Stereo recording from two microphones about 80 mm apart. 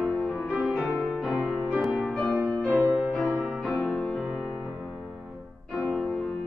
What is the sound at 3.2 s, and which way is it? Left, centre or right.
Music, centre.